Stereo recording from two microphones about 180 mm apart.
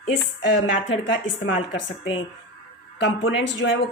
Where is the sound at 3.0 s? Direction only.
80° left.